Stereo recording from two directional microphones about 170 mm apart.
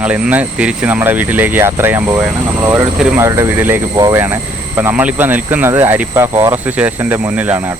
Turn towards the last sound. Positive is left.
turn(degrees=-10)  # may be behind; listen again after turning